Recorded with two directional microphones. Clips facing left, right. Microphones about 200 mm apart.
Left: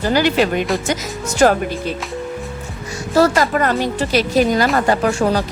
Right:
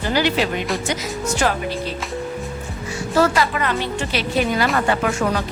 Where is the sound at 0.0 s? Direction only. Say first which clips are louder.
Left 4 dB; 45° left (ahead or behind).